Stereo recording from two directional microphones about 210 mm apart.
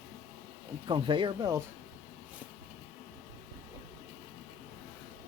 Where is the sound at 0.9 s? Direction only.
25° right (ahead or behind).